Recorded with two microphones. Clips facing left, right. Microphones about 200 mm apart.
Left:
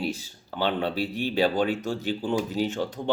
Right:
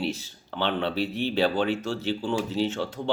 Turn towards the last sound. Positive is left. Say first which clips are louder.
# even
turn(degrees=15)  # may be behind; listen again after turning